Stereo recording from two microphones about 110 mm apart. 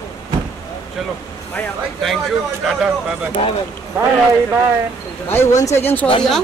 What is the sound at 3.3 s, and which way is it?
Speech, 60° left (ahead or behind).